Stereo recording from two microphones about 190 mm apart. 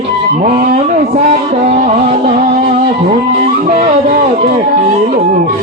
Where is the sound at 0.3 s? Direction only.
35° right (ahead or behind).